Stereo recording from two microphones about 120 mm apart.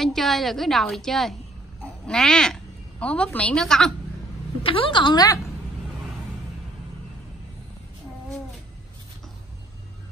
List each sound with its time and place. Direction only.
0.0 s a woman's voice: centre (ahead or behind)
4.6 s a woman's voice: 45° left (ahead or behind)